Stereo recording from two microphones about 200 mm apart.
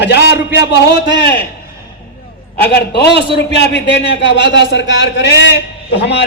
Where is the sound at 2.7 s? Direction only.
55° left (ahead or behind).